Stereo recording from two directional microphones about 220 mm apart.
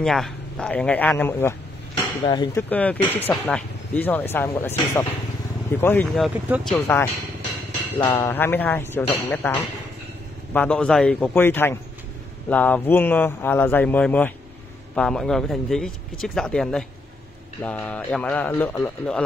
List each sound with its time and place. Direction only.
0.0 s speech: centre (ahead or behind)
2.2 s speech: 20° left (ahead or behind)
2.7 s speech: 5° left (ahead or behind)